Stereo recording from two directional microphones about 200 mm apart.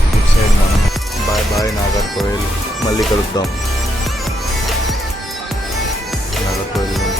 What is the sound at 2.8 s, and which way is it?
Speech, 20° left (ahead or behind).